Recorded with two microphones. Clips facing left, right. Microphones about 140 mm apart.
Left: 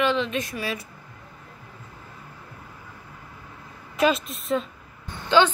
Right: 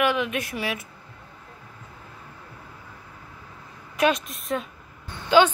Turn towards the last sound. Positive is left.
turn(degrees=-10)  # may be behind; listen again after turning